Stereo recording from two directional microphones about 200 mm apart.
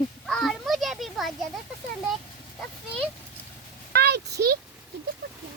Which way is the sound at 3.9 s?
55° right (ahead or behind).